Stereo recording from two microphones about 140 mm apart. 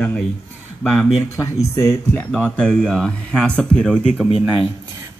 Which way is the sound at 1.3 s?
20° left (ahead or behind).